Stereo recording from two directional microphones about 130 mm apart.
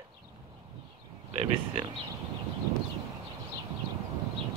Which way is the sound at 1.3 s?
55° right (ahead or behind).